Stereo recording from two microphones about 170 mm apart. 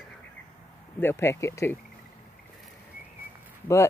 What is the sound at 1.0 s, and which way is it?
Speech, 15° left (ahead or behind).